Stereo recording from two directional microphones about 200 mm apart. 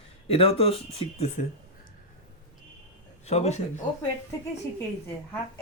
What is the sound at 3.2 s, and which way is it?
Speech, 35° left (ahead or behind).